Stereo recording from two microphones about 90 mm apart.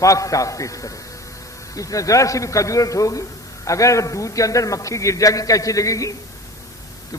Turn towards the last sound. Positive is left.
turn(degrees=40)  # may be behind; listen again after turning